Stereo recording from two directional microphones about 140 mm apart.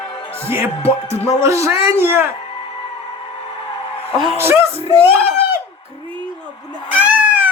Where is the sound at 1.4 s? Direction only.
20° right (ahead or behind).